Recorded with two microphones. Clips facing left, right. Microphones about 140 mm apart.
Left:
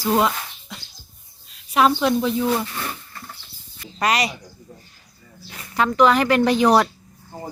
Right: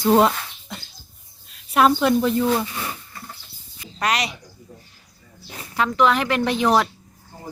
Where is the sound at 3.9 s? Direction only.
Centre (ahead or behind).